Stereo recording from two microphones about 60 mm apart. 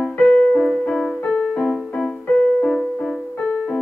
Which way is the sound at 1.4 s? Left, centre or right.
Centre.